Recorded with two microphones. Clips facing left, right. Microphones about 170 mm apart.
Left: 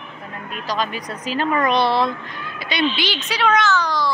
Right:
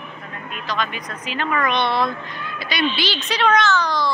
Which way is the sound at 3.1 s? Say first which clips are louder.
Right 2 dB; 5° left (ahead or behind).